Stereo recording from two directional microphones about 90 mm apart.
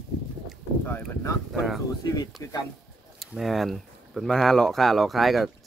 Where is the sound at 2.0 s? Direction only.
45° left (ahead or behind).